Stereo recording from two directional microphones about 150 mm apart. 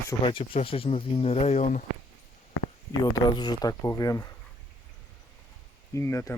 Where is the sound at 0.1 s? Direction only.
30° left (ahead or behind); by 1.8 s 50° left (ahead or behind).